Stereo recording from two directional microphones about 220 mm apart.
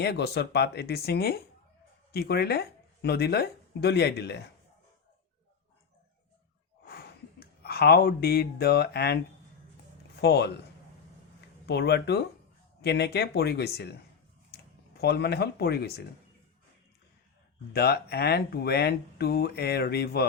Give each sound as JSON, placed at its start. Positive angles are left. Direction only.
{"t": 0.0, "sound": "speech", "side_deg": 50}
{"t": 6.8, "sound": "speech", "side_deg": 45}
{"t": 17.7, "sound": "speech", "side_deg": 45}